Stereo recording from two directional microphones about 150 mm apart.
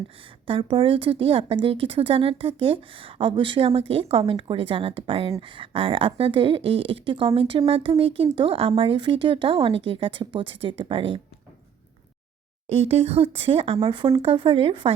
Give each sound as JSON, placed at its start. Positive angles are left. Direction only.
{"t": 0.4, "sound": "speech", "side_deg": -35}
{"t": 12.6, "sound": "speech", "side_deg": -40}